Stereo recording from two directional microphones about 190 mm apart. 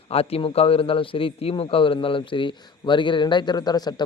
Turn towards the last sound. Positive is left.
turn(degrees=20)  # may be behind; listen again after turning